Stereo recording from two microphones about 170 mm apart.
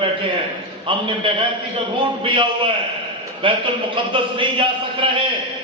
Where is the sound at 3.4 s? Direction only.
30° right (ahead or behind).